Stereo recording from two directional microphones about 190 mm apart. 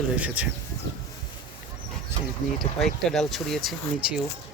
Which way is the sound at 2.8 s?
Centre (ahead or behind).